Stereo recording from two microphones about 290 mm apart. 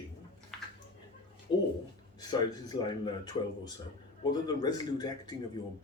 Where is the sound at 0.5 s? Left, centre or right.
Centre.